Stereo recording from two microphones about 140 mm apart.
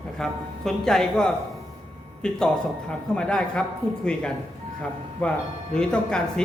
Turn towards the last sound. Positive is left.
turn(degrees=5)  # may be behind; listen again after turning